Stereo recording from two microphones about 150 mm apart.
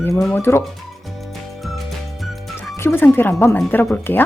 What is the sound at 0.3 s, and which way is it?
Speech, 15° left (ahead or behind).